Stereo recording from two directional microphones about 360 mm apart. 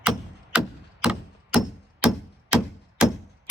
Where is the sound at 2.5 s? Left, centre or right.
Centre.